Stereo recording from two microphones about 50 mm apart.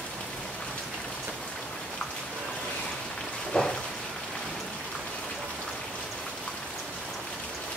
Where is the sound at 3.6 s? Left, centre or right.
Centre.